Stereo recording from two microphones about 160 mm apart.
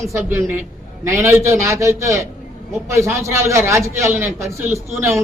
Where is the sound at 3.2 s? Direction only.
20° right (ahead or behind).